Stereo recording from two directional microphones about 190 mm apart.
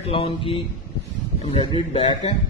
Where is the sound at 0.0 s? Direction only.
30° left (ahead or behind).